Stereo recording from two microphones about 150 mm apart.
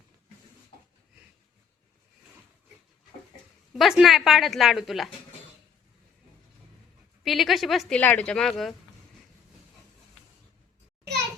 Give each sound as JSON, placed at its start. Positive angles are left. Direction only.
{"t": 3.7, "sound": "a woman's voice", "side_deg": -5}
{"t": 7.3, "sound": "a woman's voice", "side_deg": 0}